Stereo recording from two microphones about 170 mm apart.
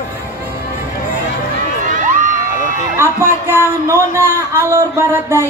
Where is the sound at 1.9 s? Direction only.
50° right (ahead or behind).